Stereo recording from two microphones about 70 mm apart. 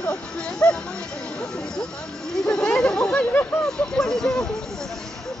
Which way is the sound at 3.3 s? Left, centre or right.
Left.